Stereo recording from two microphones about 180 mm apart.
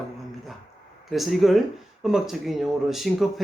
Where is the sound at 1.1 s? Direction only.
Centre (ahead or behind).